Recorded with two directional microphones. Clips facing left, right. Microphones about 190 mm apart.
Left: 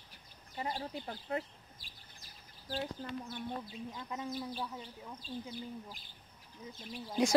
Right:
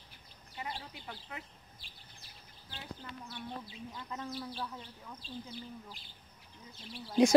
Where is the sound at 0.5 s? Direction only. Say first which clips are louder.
Left 5 dB; 40° left (ahead or behind).